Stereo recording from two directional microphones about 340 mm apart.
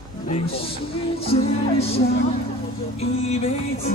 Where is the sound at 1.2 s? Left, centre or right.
Centre.